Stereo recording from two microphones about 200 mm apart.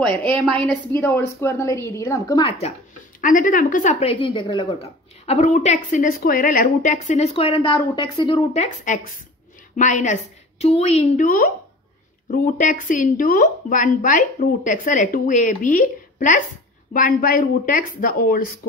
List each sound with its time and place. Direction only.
0.6 s a woman's voice: 5° left (ahead or behind); by 2.7 s 25° left (ahead or behind)
3.2 s speech: 40° left (ahead or behind); by 8.4 s 20° left (ahead or behind)
8.5 s speech: 40° left (ahead or behind)